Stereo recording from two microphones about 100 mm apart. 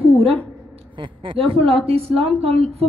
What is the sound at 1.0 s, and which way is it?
A woman's voice, 55° right (ahead or behind).